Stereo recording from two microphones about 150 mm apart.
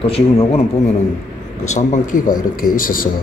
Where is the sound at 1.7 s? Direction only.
55° left (ahead or behind).